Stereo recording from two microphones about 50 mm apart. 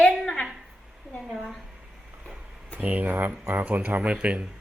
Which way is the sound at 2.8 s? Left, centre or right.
Right.